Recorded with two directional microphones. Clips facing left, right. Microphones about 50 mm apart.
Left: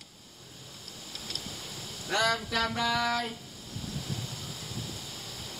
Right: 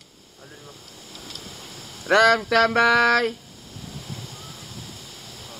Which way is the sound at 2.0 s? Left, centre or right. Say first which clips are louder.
Right 12 dB; right.